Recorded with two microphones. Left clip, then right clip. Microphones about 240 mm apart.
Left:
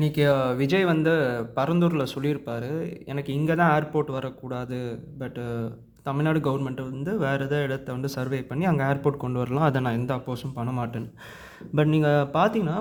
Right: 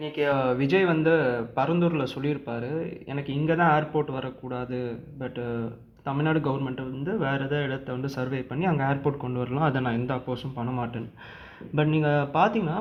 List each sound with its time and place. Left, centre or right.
0.0 s speech: left